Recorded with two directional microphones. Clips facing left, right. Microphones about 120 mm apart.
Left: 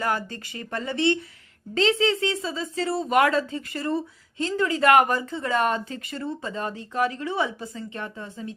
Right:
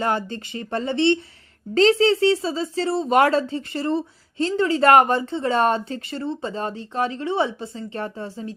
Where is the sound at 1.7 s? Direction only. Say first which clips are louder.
Right 6 dB; 40° right (ahead or behind).